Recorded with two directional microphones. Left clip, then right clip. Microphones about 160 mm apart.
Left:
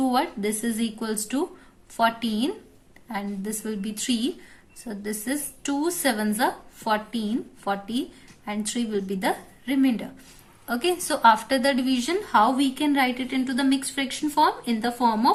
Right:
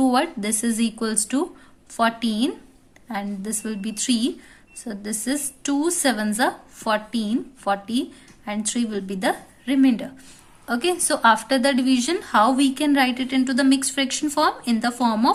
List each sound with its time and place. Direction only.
0.0 s a woman's voice: 35° right (ahead or behind)